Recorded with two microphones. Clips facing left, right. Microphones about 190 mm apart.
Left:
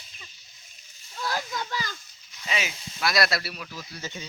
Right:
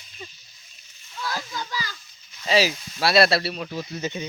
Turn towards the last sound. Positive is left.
turn(degrees=-20)  # may be behind; listen again after turning